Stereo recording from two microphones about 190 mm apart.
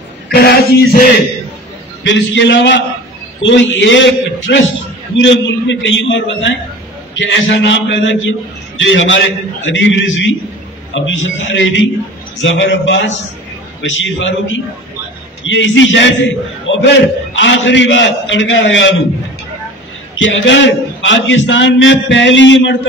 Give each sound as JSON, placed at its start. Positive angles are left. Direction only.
{"t": 0.3, "sound": "a sound", "side_deg": 55}
{"t": 2.0, "sound": "a man's voice", "side_deg": 70}
{"t": 20.2, "sound": "a man's voice", "side_deg": 80}